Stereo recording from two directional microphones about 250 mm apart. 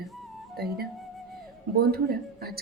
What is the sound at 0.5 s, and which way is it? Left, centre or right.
A woman's voice, right.